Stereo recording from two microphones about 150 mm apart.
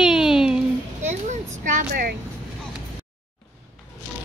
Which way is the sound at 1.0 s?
50° right (ahead or behind).